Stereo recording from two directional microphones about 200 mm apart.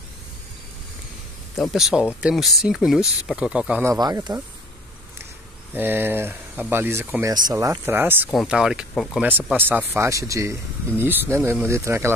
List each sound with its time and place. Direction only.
1.6 s speech: centre (ahead or behind)
3.9 s speech: 20° right (ahead or behind)
5.8 s speech: 10° right (ahead or behind)
9.3 s speech: 10° right (ahead or behind)